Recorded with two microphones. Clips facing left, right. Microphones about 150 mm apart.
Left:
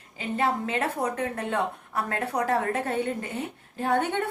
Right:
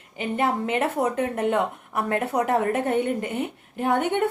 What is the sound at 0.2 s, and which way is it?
A woman's voice, 25° right (ahead or behind).